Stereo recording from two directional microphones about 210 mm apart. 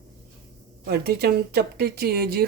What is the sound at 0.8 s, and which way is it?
Speech, 50° right (ahead or behind).